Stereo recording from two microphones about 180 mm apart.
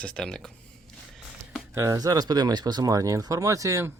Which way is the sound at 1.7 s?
15° right (ahead or behind).